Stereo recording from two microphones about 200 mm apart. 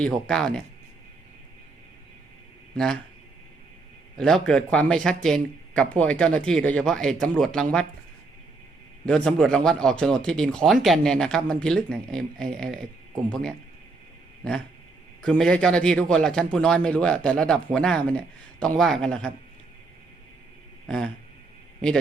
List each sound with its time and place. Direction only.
0.0 s a man's voice: 5° left (ahead or behind)
2.7 s a man's voice: 5° left (ahead or behind)
4.2 s a man's voice: 5° left (ahead or behind)
9.0 s a man's voice: 5° left (ahead or behind)
15.2 s a man's voice: 5° left (ahead or behind)
20.8 s a sound: 5° left (ahead or behind)
21.8 s speech: 5° left (ahead or behind)